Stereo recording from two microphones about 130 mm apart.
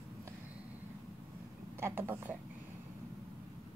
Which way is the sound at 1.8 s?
20° right (ahead or behind).